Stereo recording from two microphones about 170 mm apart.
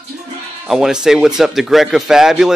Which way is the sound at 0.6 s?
5° right (ahead or behind).